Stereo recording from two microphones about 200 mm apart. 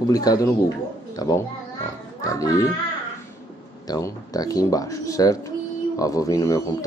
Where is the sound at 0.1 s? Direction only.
20° left (ahead or behind).